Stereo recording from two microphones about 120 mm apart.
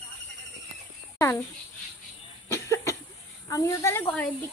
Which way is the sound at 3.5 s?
25° left (ahead or behind).